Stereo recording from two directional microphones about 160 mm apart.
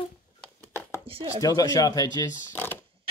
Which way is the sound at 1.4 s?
25° left (ahead or behind).